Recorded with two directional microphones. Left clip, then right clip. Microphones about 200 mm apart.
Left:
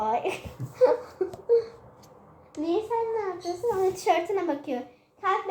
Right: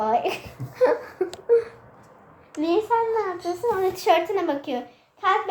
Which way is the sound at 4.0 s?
Centre (ahead or behind).